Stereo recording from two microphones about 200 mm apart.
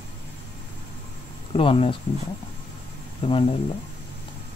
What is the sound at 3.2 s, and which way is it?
Speech, 25° left (ahead or behind).